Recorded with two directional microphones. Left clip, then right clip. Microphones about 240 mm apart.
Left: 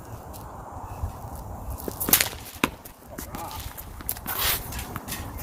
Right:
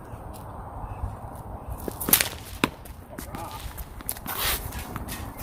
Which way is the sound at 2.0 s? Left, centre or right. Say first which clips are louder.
Left 1 dB; centre.